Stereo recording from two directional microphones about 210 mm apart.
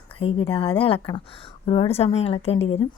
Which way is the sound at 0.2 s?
25° left (ahead or behind).